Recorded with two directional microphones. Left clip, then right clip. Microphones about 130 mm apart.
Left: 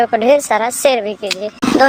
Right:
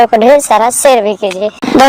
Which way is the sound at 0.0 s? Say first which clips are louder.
Right 6 dB; 35° right (ahead or behind).